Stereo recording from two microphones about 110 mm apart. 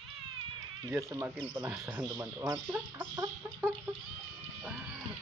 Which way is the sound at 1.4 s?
45° right (ahead or behind).